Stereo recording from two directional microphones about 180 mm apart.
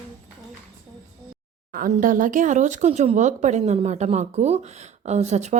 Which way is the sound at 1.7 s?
50° right (ahead or behind).